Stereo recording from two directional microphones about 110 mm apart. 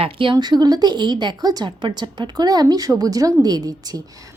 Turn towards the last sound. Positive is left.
turn(degrees=-35)  # may be behind; listen again after turning